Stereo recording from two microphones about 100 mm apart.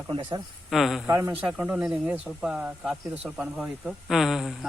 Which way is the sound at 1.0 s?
25° right (ahead or behind).